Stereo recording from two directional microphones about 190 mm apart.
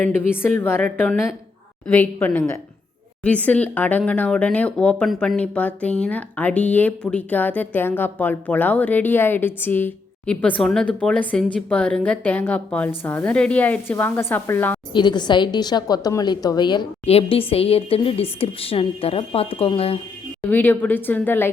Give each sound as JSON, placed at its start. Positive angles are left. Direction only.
{"t": 0.3, "sound": "speech", "side_deg": 10}
{"t": 14.9, "sound": "a woman's voice", "side_deg": 25}
{"t": 20.5, "sound": "speech", "side_deg": 10}